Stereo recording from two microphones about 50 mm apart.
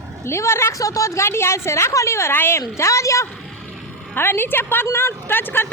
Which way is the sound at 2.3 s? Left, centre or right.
Left.